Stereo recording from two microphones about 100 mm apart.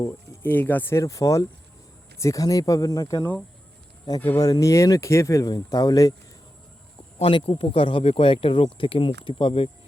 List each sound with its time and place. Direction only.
0.4 s speech: 20° left (ahead or behind); by 3.2 s 35° left (ahead or behind)
4.4 s speech: 40° left (ahead or behind)
5.5 s speech: 40° left (ahead or behind)
7.2 s speech: 75° left (ahead or behind)